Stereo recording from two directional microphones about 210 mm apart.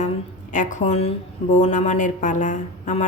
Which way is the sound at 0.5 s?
35° left (ahead or behind).